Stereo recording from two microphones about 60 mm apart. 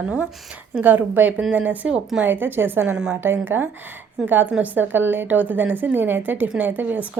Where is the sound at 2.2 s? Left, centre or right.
Right.